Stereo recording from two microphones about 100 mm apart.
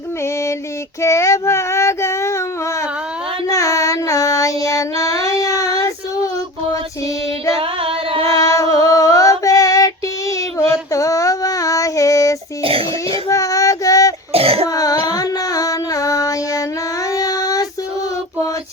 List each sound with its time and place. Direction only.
1.0 s child singing: 30° left (ahead or behind)
3.4 s child singing: 35° left (ahead or behind)
7.6 s singing: 70° right (ahead or behind)
8.2 s music: 35° left (ahead or behind)
8.7 s child singing: 35° left (ahead or behind)
12.6 s pig: 70° right (ahead or behind)
13.2 s female singing: 35° left (ahead or behind)
14.3 s a sound: 75° right (ahead or behind)
14.7 s music: 35° left (ahead or behind)
17.2 s child singing: 40° left (ahead or behind)